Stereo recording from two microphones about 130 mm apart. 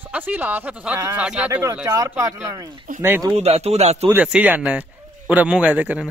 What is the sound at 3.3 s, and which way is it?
Speech, 55° right (ahead or behind).